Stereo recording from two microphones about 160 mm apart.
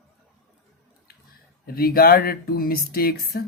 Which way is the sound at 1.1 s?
75° left (ahead or behind).